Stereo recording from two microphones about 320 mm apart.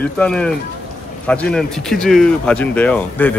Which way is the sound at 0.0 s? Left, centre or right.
Centre.